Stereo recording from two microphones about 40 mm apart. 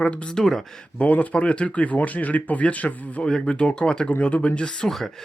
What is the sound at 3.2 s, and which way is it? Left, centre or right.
Speech, centre.